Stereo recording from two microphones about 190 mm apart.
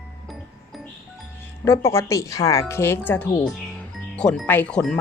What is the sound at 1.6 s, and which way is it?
Speech, 15° left (ahead or behind).